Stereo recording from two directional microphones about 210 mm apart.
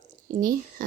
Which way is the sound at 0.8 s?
40° right (ahead or behind).